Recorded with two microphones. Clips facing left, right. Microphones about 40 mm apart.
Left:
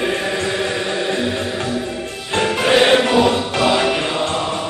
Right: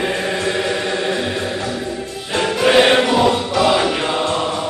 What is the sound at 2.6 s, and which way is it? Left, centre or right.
Music, centre.